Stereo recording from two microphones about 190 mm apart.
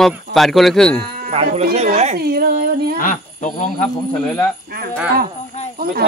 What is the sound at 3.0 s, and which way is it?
Snake, 45° left (ahead or behind).